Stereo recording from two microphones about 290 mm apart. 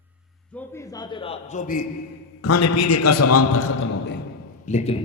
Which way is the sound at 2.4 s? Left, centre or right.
Left.